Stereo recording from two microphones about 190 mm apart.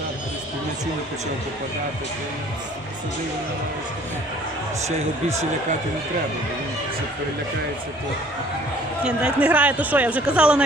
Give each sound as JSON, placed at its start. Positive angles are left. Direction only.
{"t": 4.9, "sound": "speech", "side_deg": -35}
{"t": 9.0, "sound": "a man's voice", "side_deg": -5}